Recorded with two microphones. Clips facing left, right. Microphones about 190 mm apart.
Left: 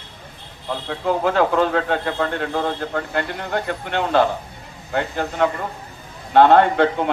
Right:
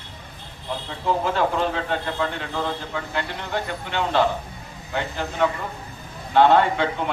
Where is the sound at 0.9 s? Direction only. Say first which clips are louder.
Left 4 dB; 60° left (ahead or behind).